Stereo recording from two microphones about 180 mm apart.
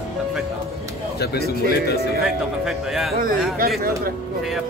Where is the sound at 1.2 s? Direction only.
60° left (ahead or behind).